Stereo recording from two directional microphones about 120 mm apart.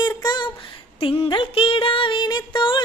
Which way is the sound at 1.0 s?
50° left (ahead or behind).